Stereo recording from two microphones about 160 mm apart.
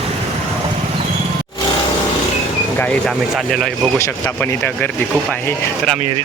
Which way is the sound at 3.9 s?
15° left (ahead or behind).